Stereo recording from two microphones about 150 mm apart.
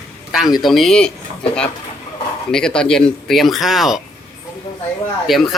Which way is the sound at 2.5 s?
5° left (ahead or behind).